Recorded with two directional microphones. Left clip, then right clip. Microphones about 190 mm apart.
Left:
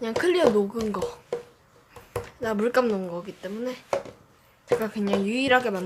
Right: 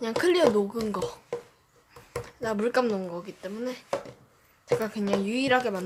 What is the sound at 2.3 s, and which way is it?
Speech, 5° right (ahead or behind).